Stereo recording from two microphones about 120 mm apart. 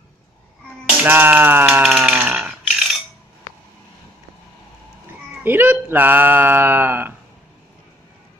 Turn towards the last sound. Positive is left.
turn(degrees=-15)  # may be behind; listen again after turning